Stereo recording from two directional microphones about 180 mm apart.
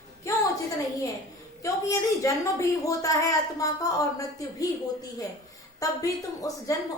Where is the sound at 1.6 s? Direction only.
20° left (ahead or behind).